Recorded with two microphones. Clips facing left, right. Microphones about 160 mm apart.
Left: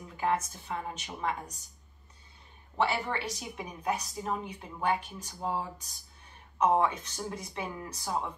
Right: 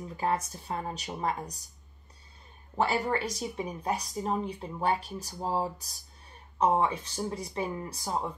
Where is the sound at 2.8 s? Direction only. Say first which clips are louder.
Right 2 dB; 40° right (ahead or behind).